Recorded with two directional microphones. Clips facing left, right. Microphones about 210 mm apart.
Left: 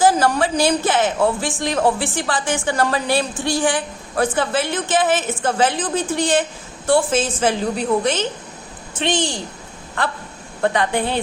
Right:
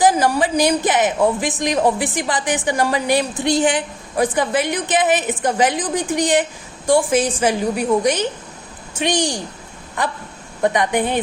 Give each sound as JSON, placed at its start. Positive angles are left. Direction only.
{"t": 0.0, "sound": "a woman's voice", "side_deg": -15}